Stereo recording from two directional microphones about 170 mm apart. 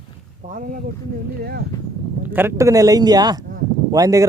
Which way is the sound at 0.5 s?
50° right (ahead or behind).